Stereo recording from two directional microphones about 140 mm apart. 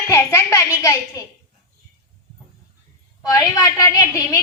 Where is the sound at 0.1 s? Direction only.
20° left (ahead or behind).